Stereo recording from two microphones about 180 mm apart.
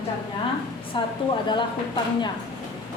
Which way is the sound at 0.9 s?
25° left (ahead or behind).